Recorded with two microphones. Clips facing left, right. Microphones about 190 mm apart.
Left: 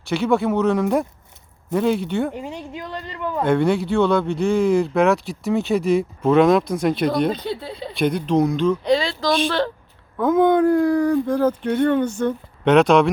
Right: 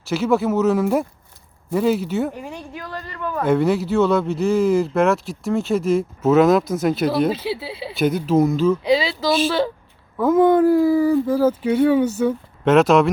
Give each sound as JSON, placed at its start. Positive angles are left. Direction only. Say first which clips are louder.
{"t": 0.0, "sound": "speech", "louder": "even", "side_deg": 0}
{"t": 2.3, "sound": "speech", "louder": "left 2 dB", "side_deg": 20}
{"t": 3.4, "sound": "speech", "louder": "right 1 dB", "side_deg": -5}